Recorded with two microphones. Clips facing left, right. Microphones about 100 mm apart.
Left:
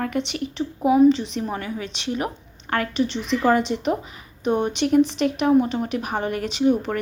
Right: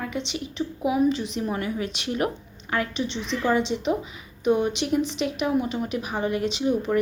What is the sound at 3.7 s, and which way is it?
Speech, 75° left (ahead or behind).